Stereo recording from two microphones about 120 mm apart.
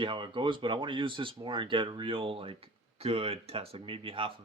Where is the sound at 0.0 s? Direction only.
45° right (ahead or behind).